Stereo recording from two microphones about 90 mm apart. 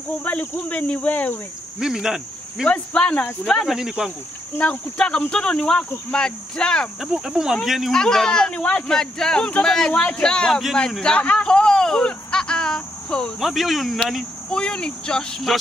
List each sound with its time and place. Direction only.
0.2 s speech: 15° left (ahead or behind)
1.8 s speech: 5° right (ahead or behind)
2.7 s speech: 10° left (ahead or behind)
3.4 s speech: centre (ahead or behind)
4.6 s speech: 15° left (ahead or behind)
7.0 s speech: 5° right (ahead or behind)